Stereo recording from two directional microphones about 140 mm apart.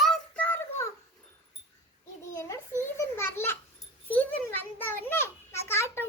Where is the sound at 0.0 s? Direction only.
5° left (ahead or behind).